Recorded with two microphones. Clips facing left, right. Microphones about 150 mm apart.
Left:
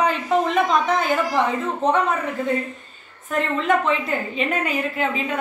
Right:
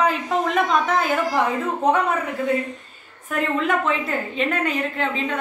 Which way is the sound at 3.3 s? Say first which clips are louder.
Left 1 dB; 5° right (ahead or behind).